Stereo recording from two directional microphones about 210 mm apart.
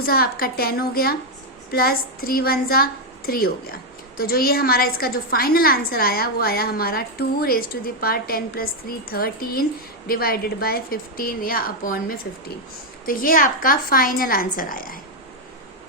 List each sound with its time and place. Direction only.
0.0 s a woman's voice: 45° left (ahead or behind)